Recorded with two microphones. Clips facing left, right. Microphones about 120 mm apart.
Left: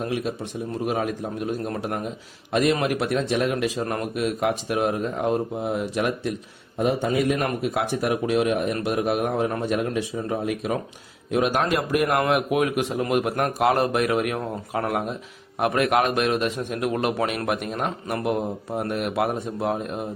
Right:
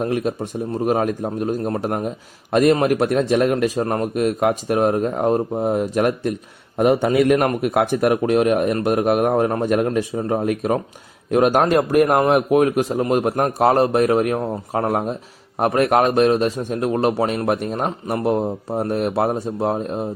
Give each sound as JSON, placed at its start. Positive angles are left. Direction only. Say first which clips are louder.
{"t": 0.0, "sound": "a man's voice", "louder": "right 5 dB", "side_deg": -45}
{"t": 6.7, "sound": "a man's voice", "louder": "right 6 dB", "side_deg": -60}